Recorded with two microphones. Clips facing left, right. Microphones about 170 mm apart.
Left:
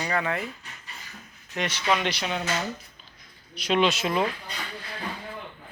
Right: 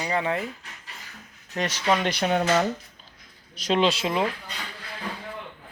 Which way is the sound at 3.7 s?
30° right (ahead or behind).